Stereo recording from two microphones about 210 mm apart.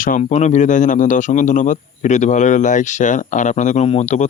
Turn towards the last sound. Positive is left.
turn(degrees=30)  # may be behind; listen again after turning